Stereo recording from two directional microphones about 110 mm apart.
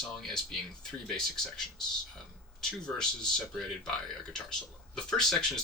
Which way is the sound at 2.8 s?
5° left (ahead or behind).